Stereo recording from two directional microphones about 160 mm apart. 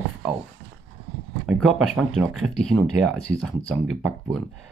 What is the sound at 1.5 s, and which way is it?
Speech, 5° right (ahead or behind).